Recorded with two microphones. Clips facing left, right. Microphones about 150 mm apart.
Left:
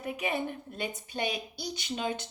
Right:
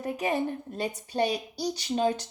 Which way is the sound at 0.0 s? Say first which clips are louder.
Right 4 dB; 40° right (ahead or behind).